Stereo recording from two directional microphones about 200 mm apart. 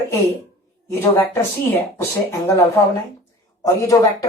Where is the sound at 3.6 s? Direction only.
15° left (ahead or behind).